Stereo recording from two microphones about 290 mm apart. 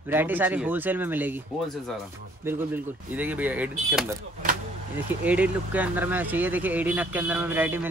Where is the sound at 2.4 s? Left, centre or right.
Centre.